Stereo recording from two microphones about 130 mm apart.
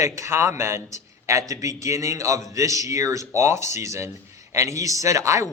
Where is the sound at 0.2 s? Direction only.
20° right (ahead or behind).